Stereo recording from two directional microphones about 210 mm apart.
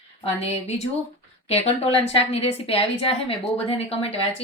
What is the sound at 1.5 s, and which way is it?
A woman's voice, 30° left (ahead or behind).